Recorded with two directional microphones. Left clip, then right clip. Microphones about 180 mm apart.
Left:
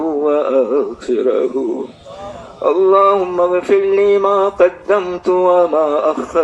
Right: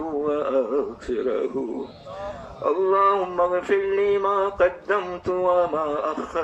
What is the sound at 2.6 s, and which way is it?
Male singing, 20° left (ahead or behind).